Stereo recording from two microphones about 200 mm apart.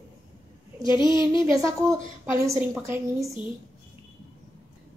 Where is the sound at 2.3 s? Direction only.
15° right (ahead or behind).